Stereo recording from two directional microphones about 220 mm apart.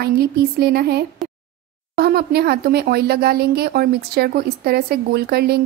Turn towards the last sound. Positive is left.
turn(degrees=-45)  # may be behind; listen again after turning